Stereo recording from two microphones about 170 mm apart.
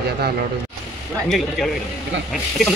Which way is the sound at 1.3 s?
Centre (ahead or behind).